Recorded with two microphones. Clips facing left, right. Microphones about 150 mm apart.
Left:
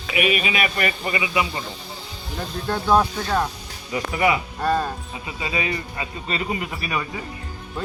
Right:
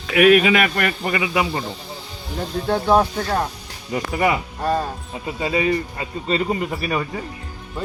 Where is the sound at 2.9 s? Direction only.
10° right (ahead or behind).